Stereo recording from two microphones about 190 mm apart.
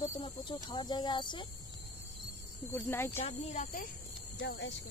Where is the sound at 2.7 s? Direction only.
10° left (ahead or behind).